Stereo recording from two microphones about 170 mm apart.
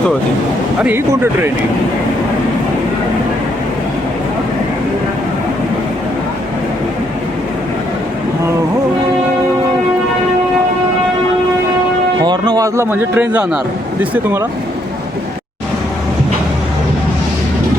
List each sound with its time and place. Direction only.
0.8 s speech: 10° right (ahead or behind)
12.2 s speech: 25° right (ahead or behind); by 14.4 s 10° right (ahead or behind)